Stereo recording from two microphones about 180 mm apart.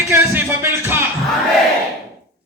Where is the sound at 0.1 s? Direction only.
10° right (ahead or behind).